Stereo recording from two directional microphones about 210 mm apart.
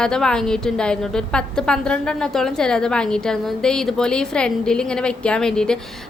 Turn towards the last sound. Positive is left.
turn(degrees=5)  # may be behind; listen again after turning